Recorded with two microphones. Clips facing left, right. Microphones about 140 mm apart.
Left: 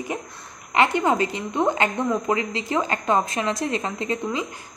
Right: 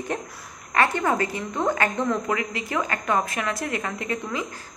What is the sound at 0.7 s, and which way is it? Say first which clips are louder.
A woman's voice: left 2 dB; 20° left (ahead or behind).